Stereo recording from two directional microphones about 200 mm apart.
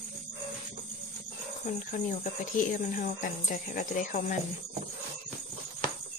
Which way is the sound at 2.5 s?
40° left (ahead or behind).